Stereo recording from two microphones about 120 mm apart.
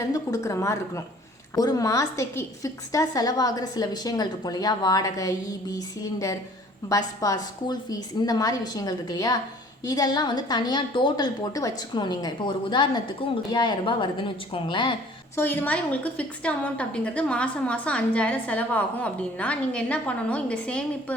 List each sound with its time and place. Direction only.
0.1 s a woman's voice: 25° left (ahead or behind); by 14.9 s 45° left (ahead or behind)
15.4 s a woman's voice: 15° left (ahead or behind)